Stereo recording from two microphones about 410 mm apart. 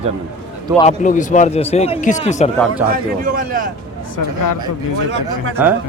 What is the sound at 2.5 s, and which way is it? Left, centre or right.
Speech, centre.